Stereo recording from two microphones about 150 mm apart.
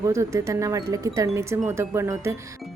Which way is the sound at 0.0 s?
20° right (ahead or behind).